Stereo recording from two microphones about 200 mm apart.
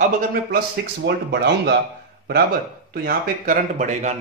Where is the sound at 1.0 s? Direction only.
55° right (ahead or behind).